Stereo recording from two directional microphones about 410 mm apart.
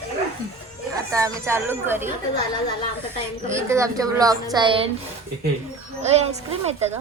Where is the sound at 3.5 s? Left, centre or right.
Centre.